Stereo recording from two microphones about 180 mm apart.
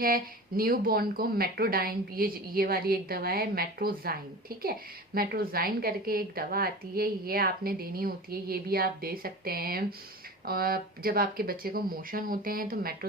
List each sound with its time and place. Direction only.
0.0 s speech: 55° right (ahead or behind)